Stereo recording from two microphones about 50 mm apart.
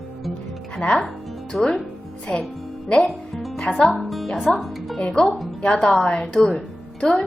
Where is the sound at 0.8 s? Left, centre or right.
Centre.